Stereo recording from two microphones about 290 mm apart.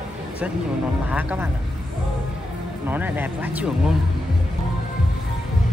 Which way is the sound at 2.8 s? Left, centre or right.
Centre.